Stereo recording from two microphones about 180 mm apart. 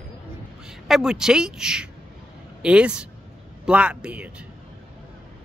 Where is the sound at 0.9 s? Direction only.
Centre (ahead or behind).